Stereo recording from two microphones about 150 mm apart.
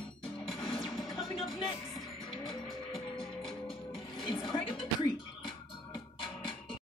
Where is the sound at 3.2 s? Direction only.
35° left (ahead or behind).